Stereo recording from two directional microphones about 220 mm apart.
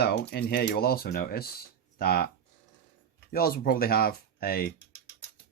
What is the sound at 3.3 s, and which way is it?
Speech, 45° left (ahead or behind).